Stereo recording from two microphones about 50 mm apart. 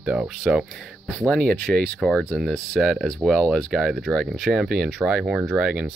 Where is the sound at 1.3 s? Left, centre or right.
Centre.